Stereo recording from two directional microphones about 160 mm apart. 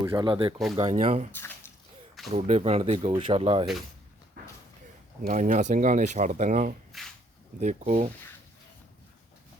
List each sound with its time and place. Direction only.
0.0 s speech: 25° right (ahead or behind)
0.8 s speech: 45° right (ahead or behind)
1.3 s speech: 15° left (ahead or behind)
2.3 s speech: 40° right (ahead or behind)
5.2 s speech: 55° right (ahead or behind)
6.9 s a sound: centre (ahead or behind)
7.6 s speech: 50° right (ahead or behind)